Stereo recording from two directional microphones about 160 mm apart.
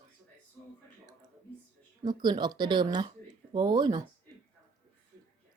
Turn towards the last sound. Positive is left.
turn(degrees=-25)  # may be behind; listen again after turning